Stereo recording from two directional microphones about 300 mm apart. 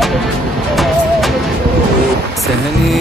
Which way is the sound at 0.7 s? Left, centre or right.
Centre.